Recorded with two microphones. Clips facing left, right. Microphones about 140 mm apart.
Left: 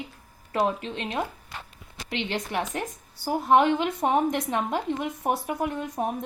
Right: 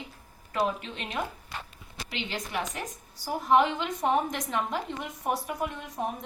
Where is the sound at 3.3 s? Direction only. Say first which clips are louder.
Left 3 dB; 55° left (ahead or behind).